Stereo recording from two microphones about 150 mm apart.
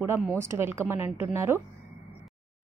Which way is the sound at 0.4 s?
15° right (ahead or behind).